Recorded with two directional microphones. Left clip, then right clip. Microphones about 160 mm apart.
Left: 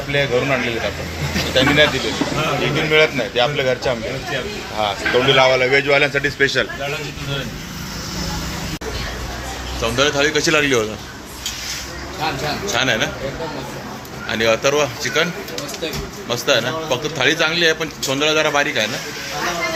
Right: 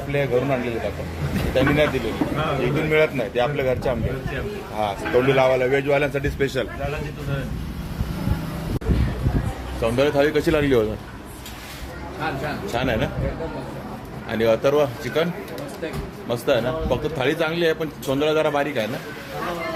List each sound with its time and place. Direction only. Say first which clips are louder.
0.1 s speech: left 4 dB; centre (ahead or behind)
2.9 s a man's voice: left 5 dB; 5° right (ahead or behind)
9.8 s speech: left 2 dB; 20° right (ahead or behind)
12.6 s a man's voice: left 6 dB; 15° right (ahead or behind)
14.3 s speech: left 3 dB; 20° right (ahead or behind)
16.3 s a man's voice: left 3 dB; 15° right (ahead or behind)